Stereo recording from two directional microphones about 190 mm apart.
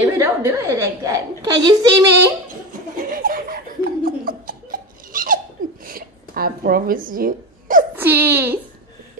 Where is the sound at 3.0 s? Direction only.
50° right (ahead or behind).